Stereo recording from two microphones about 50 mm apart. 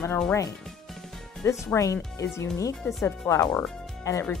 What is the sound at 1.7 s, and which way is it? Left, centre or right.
Speech, left.